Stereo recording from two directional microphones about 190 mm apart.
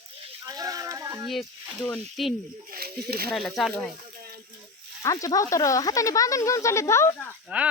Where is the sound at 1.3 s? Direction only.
Centre (ahead or behind).